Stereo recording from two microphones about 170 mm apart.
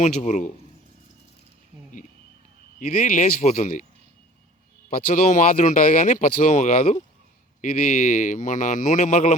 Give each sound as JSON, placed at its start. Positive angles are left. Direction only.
{"t": 0.0, "sound": "speech", "side_deg": 45}
{"t": 2.7, "sound": "speech", "side_deg": 45}
{"t": 4.9, "sound": "speech", "side_deg": 50}